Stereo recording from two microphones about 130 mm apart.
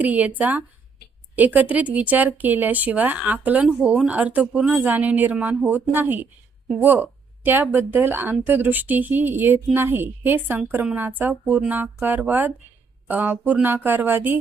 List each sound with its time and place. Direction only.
0.0 s speech: 10° right (ahead or behind)